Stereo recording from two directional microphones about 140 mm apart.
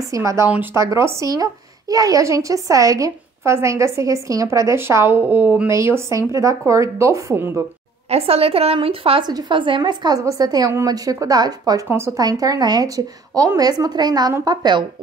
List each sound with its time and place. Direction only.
0.0 s a woman's voice: 25° right (ahead or behind)
8.1 s a woman's voice: 45° right (ahead or behind)
9.3 s a woman's voice: 30° right (ahead or behind)